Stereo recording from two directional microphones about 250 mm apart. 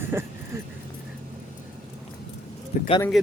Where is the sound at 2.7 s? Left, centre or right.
Left.